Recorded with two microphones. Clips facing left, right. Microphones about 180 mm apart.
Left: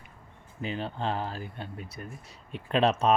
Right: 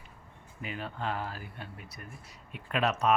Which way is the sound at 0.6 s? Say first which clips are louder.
Left 4 dB; 30° left (ahead or behind).